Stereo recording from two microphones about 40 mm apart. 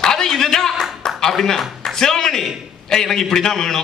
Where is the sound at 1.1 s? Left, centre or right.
Centre.